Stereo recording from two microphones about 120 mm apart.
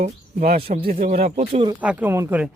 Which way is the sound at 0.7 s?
70° right (ahead or behind).